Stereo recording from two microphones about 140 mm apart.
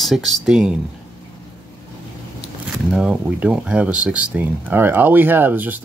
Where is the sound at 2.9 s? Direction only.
5° right (ahead or behind).